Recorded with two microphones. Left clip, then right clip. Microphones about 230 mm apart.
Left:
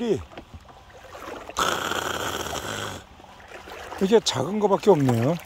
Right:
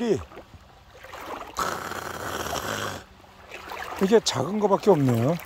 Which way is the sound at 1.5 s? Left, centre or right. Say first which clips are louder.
Left 5 dB; centre.